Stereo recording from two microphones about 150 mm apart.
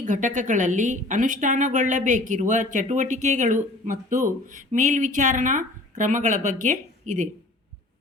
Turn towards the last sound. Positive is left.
turn(degrees=-55)  # may be behind; listen again after turning